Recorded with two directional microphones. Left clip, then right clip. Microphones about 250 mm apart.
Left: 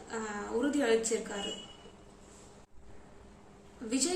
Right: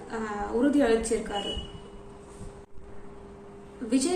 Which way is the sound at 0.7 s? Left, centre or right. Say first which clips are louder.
Right 6 dB; centre.